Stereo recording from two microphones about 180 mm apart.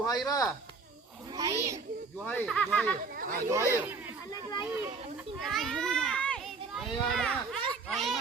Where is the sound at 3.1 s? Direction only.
55° right (ahead or behind).